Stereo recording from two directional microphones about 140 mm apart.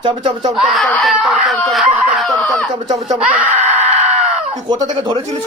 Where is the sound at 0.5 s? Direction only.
Centre (ahead or behind).